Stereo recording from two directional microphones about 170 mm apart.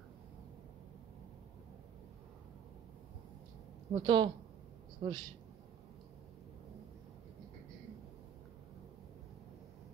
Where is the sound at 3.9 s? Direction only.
25° right (ahead or behind).